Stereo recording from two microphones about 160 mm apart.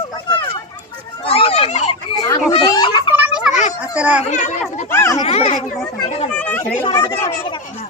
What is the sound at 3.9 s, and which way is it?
Chatter, 10° right (ahead or behind).